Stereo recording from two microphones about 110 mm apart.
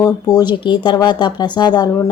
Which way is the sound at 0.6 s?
45° left (ahead or behind).